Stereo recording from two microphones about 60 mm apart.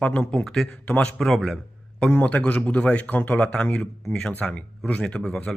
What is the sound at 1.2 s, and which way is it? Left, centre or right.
Speech, centre.